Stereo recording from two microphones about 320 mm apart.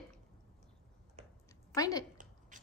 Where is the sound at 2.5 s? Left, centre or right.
Right.